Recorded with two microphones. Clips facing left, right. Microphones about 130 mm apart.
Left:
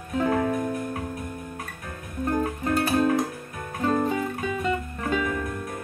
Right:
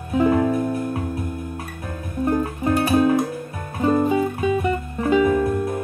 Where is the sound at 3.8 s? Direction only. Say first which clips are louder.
Right 6 dB; 15° right (ahead or behind).